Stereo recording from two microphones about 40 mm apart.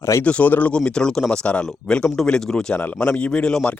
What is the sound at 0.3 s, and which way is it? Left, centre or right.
Speech, left.